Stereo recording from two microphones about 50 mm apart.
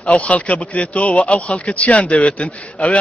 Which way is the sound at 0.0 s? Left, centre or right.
Left.